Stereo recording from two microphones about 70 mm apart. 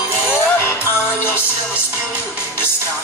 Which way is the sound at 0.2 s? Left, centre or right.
Left.